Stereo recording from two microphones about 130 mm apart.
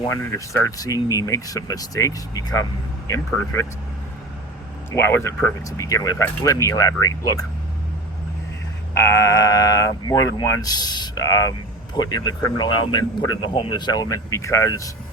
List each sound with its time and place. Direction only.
0.1 s speech: 20° left (ahead or behind)
4.9 s speech: 15° left (ahead or behind)
9.0 s speech: 25° left (ahead or behind)